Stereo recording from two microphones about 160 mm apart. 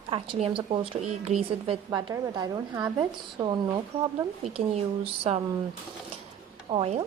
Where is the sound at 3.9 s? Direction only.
35° right (ahead or behind).